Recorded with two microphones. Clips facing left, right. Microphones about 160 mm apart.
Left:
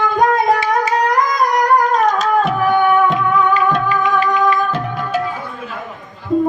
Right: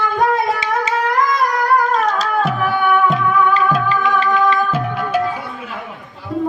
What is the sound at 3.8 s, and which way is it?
Music, 30° right (ahead or behind).